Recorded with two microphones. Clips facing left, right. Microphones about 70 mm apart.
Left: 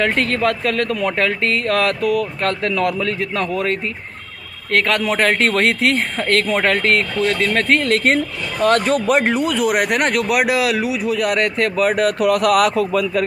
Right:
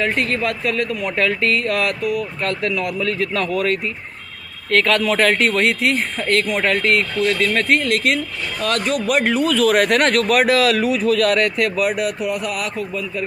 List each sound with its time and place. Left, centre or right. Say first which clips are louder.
0.0 s speech: left 3 dB; left
3.2 s speech: right 1 dB; left
12.2 s speech: left 9 dB; left